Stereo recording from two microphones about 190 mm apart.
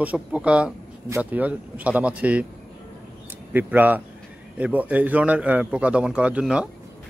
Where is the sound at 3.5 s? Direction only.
10° right (ahead or behind).